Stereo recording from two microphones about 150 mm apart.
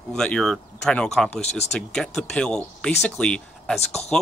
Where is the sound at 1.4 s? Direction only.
45° left (ahead or behind).